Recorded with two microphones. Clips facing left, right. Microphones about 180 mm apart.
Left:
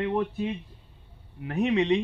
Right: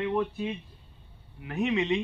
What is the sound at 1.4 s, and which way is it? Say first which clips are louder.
Speech: left 3 dB; 40° left (ahead or behind).